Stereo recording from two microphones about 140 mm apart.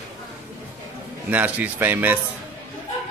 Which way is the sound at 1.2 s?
10° right (ahead or behind).